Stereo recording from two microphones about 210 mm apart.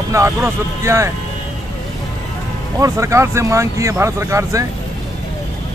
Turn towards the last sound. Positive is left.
turn(degrees=-15)  # may be behind; listen again after turning